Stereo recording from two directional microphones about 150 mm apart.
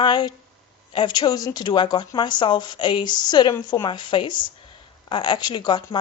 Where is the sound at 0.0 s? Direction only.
30° left (ahead or behind).